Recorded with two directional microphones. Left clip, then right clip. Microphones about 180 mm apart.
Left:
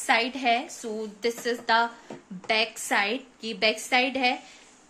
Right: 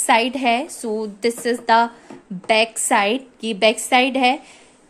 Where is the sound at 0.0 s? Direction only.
45° right (ahead or behind).